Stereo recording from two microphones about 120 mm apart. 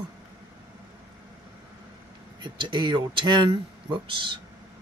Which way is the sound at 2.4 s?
40° right (ahead or behind).